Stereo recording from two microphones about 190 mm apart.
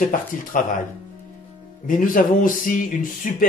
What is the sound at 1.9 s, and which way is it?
Speech, 45° left (ahead or behind).